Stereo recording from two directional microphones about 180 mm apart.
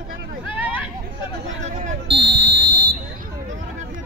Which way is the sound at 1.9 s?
30° right (ahead or behind).